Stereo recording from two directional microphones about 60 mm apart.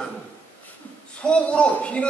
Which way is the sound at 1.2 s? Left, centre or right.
Centre.